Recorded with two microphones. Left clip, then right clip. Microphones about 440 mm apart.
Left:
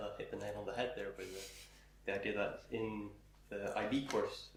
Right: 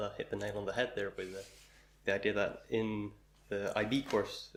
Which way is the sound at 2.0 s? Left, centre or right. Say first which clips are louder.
Right 6 dB; right.